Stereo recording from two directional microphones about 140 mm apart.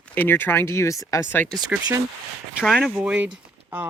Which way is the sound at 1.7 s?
10° right (ahead or behind).